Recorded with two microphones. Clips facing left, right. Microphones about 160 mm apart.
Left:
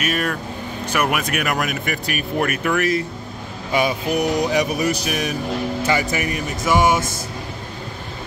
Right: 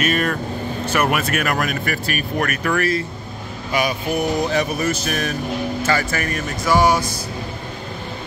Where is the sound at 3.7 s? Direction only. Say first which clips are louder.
Left 1 dB; 25° left (ahead or behind).